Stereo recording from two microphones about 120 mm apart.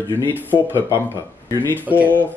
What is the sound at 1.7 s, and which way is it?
Speech, 15° right (ahead or behind).